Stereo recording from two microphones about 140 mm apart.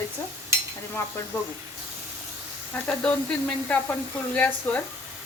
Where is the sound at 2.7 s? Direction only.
10° left (ahead or behind).